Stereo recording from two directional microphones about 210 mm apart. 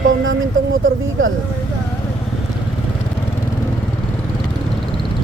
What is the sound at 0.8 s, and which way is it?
Speech, 70° right (ahead or behind).